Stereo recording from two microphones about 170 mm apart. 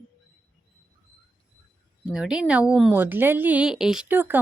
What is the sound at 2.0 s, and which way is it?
A woman's voice, 5° right (ahead or behind).